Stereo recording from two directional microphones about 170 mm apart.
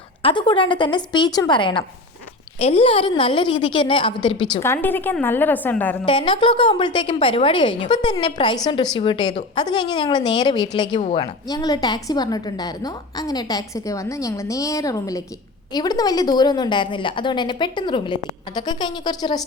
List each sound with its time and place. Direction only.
0.2 s a woman's voice: 30° left (ahead or behind)
4.6 s a woman's voice: 15° left (ahead or behind)
6.1 s a woman's voice: 30° left (ahead or behind)
11.4 s a woman's voice: 25° left (ahead or behind)